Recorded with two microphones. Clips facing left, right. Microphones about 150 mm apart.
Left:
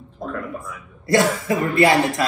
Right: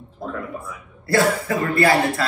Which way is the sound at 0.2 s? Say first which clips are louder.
Left 1 dB; centre (ahead or behind).